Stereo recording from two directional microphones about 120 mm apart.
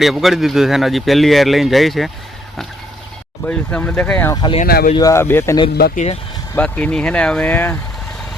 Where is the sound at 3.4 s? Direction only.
10° left (ahead or behind).